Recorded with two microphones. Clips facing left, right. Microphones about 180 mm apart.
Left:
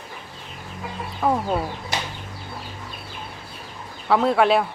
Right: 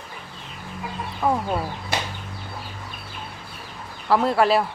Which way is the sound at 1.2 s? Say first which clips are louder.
Left 1 dB; 5° left (ahead or behind).